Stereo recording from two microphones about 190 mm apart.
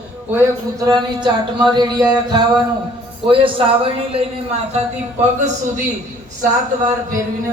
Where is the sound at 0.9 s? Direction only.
25° right (ahead or behind).